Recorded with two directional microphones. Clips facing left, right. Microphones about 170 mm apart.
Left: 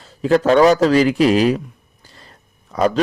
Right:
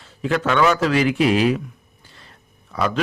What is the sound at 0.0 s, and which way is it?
Speech, 35° left (ahead or behind).